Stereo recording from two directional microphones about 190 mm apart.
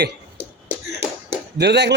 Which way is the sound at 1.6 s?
65° right (ahead or behind).